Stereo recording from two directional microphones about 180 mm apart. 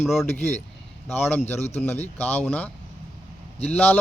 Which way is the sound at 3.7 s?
10° left (ahead or behind).